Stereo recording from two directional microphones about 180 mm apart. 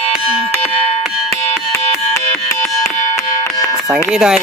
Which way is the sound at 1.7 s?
15° left (ahead or behind).